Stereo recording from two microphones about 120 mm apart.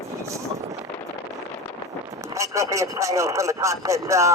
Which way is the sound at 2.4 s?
25° right (ahead or behind).